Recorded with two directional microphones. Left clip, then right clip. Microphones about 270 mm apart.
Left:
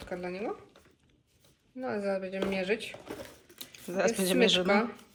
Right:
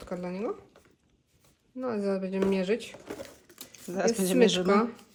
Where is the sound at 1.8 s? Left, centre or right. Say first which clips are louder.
Right 2 dB; right.